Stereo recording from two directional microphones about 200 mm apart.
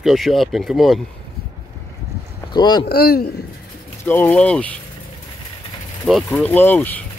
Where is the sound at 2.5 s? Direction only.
20° left (ahead or behind).